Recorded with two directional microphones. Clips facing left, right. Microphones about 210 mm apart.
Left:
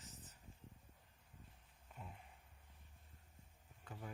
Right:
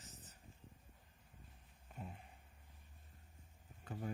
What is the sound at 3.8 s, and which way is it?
Speech, 40° right (ahead or behind).